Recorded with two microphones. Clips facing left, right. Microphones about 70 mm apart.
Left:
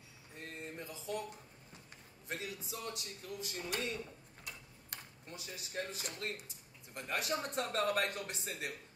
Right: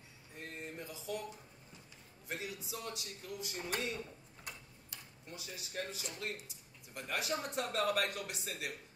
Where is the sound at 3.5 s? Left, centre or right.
Right.